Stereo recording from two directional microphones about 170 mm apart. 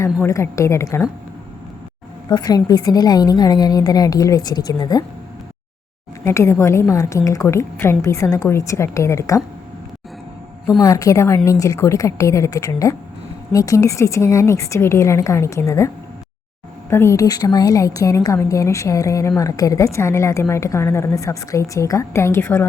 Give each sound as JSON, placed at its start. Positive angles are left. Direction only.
{"t": 0.0, "sound": "a woman's voice", "side_deg": 15}
{"t": 2.3, "sound": "a woman's voice", "side_deg": 20}
{"t": 6.2, "sound": "a woman's voice", "side_deg": 15}
{"t": 10.8, "sound": "a woman's voice", "side_deg": 20}
{"t": 16.9, "sound": "a woman's voice", "side_deg": 15}